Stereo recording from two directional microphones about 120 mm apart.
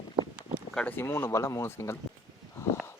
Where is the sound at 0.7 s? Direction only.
5° left (ahead or behind).